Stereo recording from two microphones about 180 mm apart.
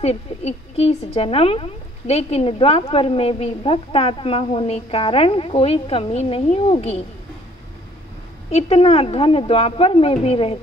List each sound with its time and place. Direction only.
0.0 s a woman's voice: 35° left (ahead or behind)
8.5 s a woman's voice: 35° left (ahead or behind)